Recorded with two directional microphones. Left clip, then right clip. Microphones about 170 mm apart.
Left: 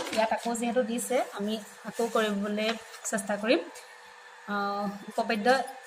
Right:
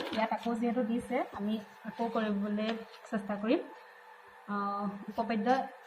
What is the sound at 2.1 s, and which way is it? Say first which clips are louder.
A woman's voice: left 7 dB; 90° left.